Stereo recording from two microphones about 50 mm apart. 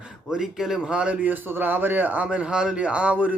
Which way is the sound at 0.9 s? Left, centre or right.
Right.